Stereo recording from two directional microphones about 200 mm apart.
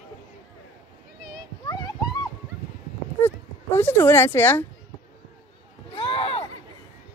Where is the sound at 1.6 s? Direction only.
20° left (ahead or behind).